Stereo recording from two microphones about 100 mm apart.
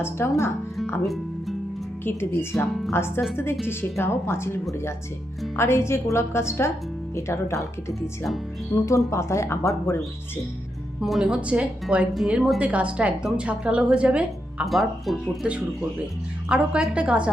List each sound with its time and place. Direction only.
0.0 s speech: 25° left (ahead or behind)
1.0 s music: centre (ahead or behind)
2.0 s speech: 25° left (ahead or behind)
11.0 s a woman's voice: 5° right (ahead or behind)
14.7 s speech: centre (ahead or behind)
16.5 s a woman's voice: 10° right (ahead or behind)